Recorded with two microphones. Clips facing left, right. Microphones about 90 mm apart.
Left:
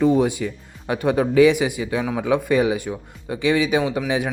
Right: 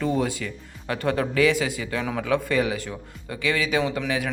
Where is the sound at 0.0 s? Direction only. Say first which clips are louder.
Left 7 dB; 20° left (ahead or behind).